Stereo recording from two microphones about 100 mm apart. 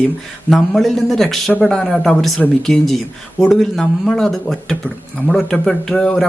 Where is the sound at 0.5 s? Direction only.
Centre (ahead or behind).